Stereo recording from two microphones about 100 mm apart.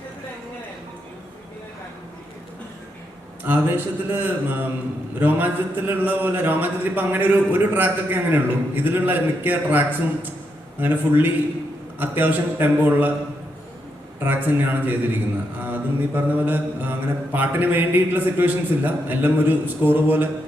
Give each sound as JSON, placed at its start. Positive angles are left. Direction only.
{"t": 3.4, "sound": "mantra", "side_deg": -20}
{"t": 14.2, "sound": "mantra", "side_deg": -20}